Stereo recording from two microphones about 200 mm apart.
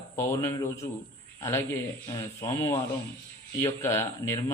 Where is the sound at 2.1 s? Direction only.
15° left (ahead or behind).